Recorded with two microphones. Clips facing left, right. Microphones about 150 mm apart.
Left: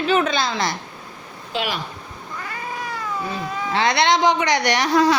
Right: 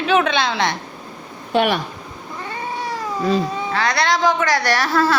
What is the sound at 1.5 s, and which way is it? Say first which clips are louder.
Speech: right 8 dB; 60° right (ahead or behind).